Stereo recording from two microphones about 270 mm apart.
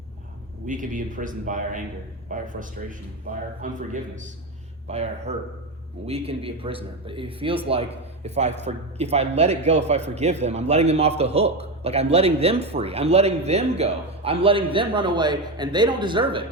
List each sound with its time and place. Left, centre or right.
0.6 s a man's voice: right